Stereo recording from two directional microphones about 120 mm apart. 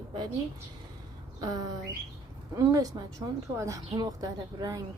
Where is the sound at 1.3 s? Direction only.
30° right (ahead or behind).